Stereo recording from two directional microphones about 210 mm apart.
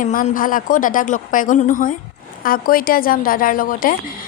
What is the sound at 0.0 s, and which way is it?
A woman's voice, 40° left (ahead or behind).